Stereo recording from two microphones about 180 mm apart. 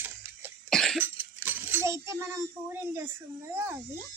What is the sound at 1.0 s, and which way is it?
Speech, 10° right (ahead or behind).